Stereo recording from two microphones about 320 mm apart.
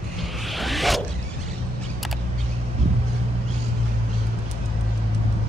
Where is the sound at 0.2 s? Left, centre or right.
Centre.